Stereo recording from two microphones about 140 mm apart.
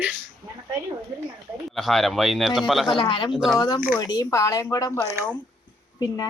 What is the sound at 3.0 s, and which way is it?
Speech, 35° left (ahead or behind).